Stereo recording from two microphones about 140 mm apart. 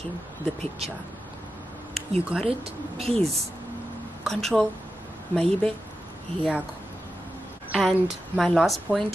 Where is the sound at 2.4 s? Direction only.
45° right (ahead or behind).